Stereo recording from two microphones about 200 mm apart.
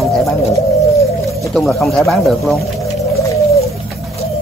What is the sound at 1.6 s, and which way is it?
Speech, centre (ahead or behind).